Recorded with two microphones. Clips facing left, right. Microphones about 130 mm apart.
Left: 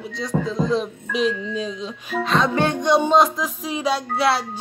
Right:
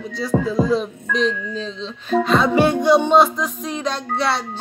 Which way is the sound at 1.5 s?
10° left (ahead or behind).